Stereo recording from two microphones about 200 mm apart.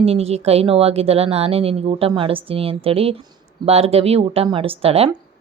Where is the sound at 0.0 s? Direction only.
30° right (ahead or behind).